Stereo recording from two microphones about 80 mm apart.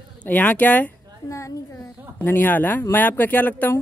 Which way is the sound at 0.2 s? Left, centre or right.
Left.